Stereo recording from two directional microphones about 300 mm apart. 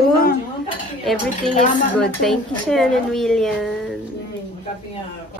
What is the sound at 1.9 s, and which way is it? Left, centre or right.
Speech, centre.